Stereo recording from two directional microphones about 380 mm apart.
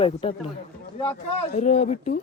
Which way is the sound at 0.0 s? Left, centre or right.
Centre.